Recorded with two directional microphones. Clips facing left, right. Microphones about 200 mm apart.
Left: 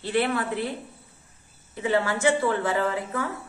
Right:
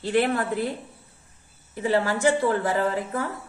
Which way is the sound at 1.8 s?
35° right (ahead or behind).